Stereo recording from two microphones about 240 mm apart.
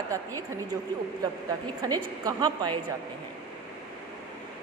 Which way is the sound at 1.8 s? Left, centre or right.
Centre.